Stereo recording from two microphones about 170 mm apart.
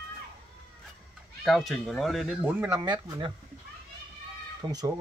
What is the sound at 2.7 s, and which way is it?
Speech, 20° right (ahead or behind).